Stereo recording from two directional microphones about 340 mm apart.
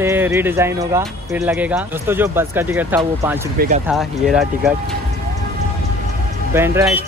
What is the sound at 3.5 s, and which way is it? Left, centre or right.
Speech, right.